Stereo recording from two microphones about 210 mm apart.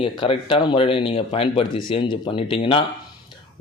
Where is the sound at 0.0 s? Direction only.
25° left (ahead or behind).